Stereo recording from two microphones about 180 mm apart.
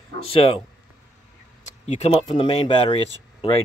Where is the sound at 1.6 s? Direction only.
40° left (ahead or behind).